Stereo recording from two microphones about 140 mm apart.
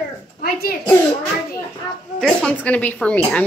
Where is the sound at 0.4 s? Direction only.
90° left.